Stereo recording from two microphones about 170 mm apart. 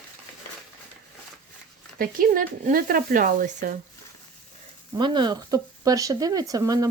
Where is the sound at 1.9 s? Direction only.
55° right (ahead or behind).